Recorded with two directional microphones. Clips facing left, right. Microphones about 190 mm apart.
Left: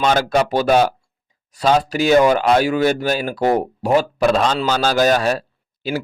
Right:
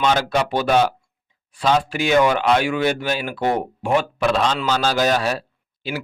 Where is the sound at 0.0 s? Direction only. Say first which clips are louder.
Left 3 dB; 45° left (ahead or behind).